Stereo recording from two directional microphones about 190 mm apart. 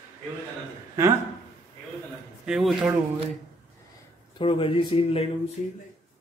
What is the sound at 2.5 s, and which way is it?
Speech, centre (ahead or behind).